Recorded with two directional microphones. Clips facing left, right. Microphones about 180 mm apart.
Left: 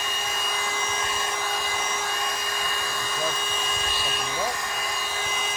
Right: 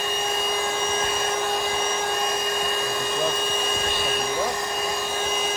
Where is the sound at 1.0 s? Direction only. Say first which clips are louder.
Right 5 dB; 55° right (ahead or behind).